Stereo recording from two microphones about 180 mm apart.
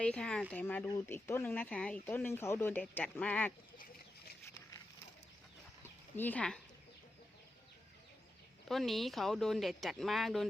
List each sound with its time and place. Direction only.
0.0 s speech: 5° left (ahead or behind)
5.8 s a sound: 10° left (ahead or behind)
8.6 s speech: centre (ahead or behind)